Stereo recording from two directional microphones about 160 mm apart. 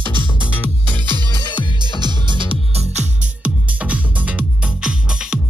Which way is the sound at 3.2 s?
10° right (ahead or behind).